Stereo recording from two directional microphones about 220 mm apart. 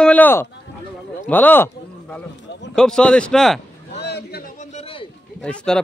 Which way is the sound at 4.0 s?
45° left (ahead or behind).